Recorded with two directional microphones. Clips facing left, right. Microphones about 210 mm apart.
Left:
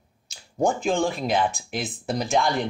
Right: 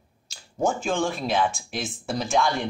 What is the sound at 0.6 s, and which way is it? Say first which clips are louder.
Speech: left 2 dB; 15° left (ahead or behind).